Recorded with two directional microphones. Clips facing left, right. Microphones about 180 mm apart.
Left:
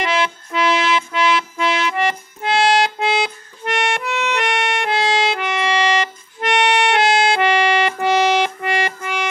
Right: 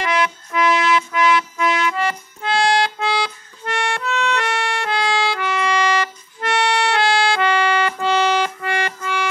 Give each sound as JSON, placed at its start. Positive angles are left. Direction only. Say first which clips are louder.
{"t": 0.0, "sound": "music", "louder": "even", "side_deg": 25}